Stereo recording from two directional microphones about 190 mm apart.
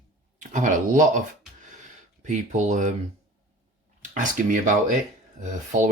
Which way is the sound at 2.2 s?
40° right (ahead or behind).